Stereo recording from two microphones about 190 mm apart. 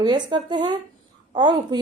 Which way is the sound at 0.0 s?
25° right (ahead or behind).